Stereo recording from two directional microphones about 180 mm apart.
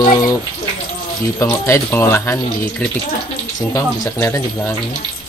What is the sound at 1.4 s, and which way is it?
Speech, 15° left (ahead or behind).